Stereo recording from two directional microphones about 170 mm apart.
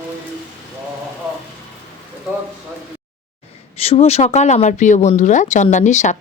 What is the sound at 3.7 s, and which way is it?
Speech, 35° left (ahead or behind).